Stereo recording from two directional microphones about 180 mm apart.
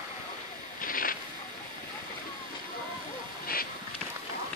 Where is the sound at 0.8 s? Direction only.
50° left (ahead or behind).